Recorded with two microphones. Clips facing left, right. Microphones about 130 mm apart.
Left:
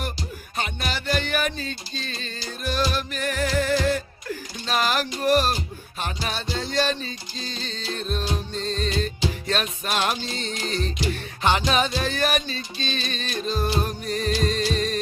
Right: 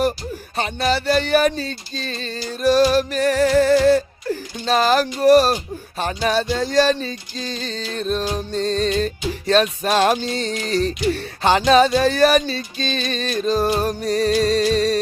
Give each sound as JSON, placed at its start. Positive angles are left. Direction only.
{"t": 0.5, "sound": "music", "side_deg": -35}
{"t": 2.9, "sound": "speech", "side_deg": -40}
{"t": 6.0, "sound": "music", "side_deg": -40}